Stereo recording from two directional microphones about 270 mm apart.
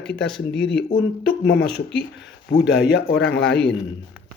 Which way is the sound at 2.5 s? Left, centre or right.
Left.